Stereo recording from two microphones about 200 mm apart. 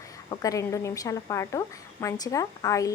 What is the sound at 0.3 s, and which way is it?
A woman's voice, 15° left (ahead or behind).